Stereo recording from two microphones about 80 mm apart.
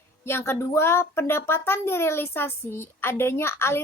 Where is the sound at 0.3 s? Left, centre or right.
Left.